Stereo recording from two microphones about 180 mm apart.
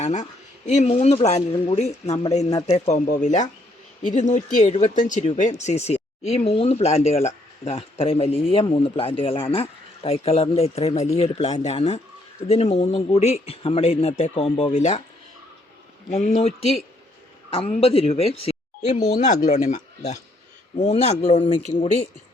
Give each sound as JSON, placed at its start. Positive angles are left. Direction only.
{"t": 0.0, "sound": "speech", "side_deg": 40}
{"t": 2.5, "sound": "speech", "side_deg": 25}
{"t": 2.7, "sound": "speech", "side_deg": 40}
{"t": 16.0, "sound": "speech", "side_deg": 40}